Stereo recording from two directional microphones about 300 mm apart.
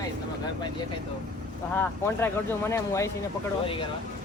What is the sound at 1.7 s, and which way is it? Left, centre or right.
Speech, centre.